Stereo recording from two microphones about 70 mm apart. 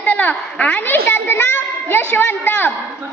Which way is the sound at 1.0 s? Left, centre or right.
Left.